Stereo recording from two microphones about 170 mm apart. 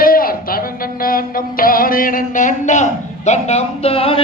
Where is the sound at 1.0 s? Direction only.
55° left (ahead or behind).